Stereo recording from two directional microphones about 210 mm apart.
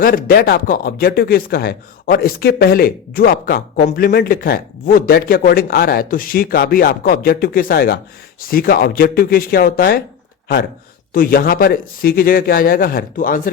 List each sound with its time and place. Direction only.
0.0 s speech: 40° left (ahead or behind)
11.1 s speech: 40° left (ahead or behind)